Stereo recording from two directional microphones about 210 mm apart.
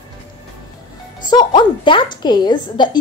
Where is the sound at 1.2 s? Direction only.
20° left (ahead or behind).